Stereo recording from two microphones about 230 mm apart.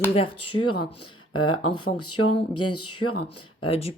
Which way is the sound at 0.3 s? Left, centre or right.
Left.